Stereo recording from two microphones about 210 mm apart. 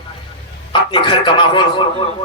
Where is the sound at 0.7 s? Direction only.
25° left (ahead or behind).